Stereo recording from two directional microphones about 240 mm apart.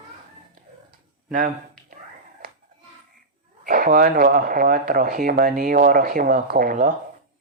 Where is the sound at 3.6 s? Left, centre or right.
Right.